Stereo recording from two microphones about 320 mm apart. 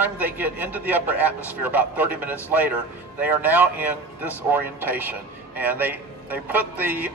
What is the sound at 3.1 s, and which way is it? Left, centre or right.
A man's voice, centre.